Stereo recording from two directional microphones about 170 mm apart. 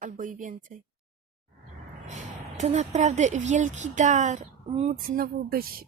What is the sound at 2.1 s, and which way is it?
Speech, 45° right (ahead or behind).